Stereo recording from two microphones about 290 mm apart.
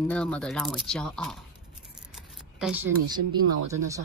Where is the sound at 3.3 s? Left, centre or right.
Centre.